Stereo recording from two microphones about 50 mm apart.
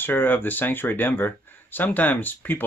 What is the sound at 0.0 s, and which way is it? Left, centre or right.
Speech, left.